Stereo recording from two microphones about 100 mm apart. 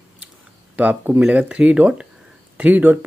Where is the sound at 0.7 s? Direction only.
20° right (ahead or behind).